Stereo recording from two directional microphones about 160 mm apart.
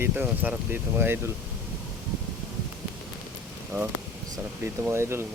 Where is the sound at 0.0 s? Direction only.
10° right (ahead or behind).